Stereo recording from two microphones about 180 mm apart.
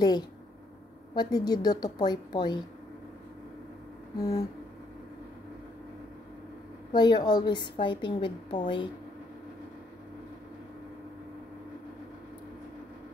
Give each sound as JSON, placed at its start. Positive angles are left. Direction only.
{"t": 1.1, "sound": "a woman's voice", "side_deg": 25}
{"t": 4.2, "sound": "a woman's voice", "side_deg": 20}
{"t": 6.9, "sound": "a woman's voice", "side_deg": 25}